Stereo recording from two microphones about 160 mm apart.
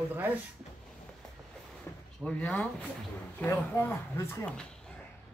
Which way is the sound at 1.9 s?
15° left (ahead or behind).